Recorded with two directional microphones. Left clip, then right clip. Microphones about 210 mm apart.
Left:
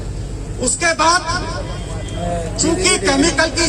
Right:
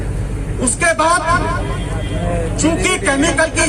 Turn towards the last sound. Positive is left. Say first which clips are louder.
# right 1 dB
turn(degrees=-25)  # may be behind; listen again after turning